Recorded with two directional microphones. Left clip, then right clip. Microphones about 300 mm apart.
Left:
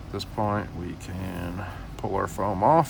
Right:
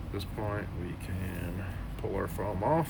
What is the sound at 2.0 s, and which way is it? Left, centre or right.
Speech, left.